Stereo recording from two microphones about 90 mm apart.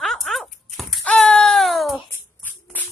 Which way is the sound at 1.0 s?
10° left (ahead or behind).